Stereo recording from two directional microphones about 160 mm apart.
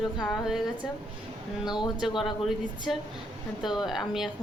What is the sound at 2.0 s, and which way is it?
A woman's voice, centre (ahead or behind).